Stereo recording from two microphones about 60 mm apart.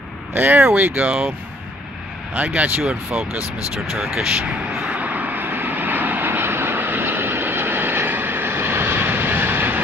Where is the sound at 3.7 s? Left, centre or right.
Centre.